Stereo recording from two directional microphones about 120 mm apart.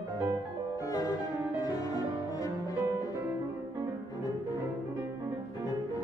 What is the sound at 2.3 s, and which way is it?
Cello, 30° left (ahead or behind).